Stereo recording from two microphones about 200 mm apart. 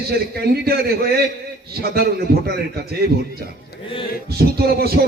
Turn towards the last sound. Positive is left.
turn(degrees=-50)  # may be behind; listen again after turning